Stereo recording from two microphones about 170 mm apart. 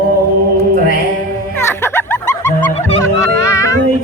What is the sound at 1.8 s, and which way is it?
Music, 15° left (ahead or behind).